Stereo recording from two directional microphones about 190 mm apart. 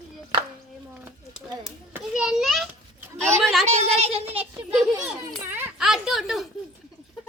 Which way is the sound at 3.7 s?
35° right (ahead or behind).